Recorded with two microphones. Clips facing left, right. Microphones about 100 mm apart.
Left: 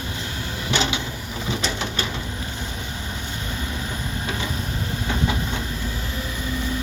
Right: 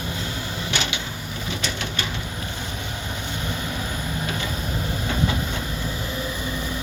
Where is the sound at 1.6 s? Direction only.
35° left (ahead or behind).